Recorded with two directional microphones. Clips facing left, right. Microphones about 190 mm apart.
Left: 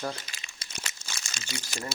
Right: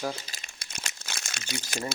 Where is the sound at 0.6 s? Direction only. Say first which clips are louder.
Even; 55° right (ahead or behind).